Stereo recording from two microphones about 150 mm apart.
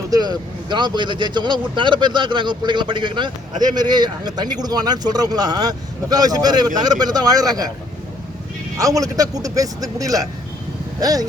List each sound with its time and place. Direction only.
0.1 s speech: 25° right (ahead or behind)
8.8 s speech: 25° right (ahead or behind)